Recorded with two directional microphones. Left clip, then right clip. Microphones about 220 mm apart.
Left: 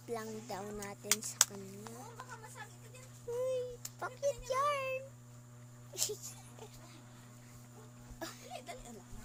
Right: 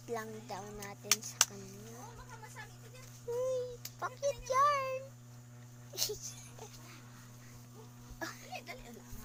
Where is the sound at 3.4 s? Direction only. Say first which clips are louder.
Even; 5° left (ahead or behind).